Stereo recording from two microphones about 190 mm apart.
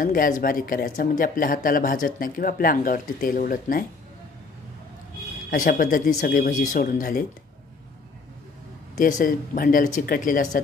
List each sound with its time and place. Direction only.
0.0 s speech: 45° left (ahead or behind)
5.5 s speech: 50° left (ahead or behind)
9.0 s speech: 45° left (ahead or behind)